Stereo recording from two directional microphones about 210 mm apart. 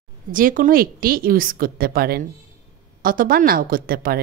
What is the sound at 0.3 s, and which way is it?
Speech, 40° right (ahead or behind).